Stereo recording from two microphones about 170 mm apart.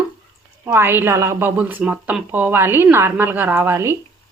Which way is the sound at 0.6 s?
15° right (ahead or behind).